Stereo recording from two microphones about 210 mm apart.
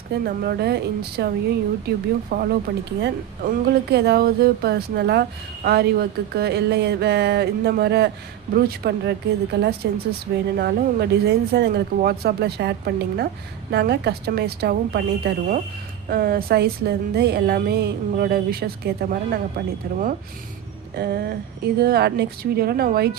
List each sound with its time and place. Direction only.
0.3 s speech: 50° right (ahead or behind)
2.3 s speech: 45° right (ahead or behind)